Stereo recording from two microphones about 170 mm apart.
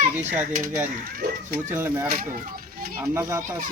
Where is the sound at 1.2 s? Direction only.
60° right (ahead or behind).